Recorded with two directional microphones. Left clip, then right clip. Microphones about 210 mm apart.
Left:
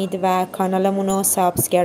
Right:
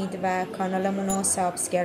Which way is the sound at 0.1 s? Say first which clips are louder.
Left 7 dB; 35° left (ahead or behind).